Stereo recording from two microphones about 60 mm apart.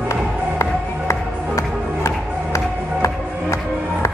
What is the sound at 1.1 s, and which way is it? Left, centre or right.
Music, left.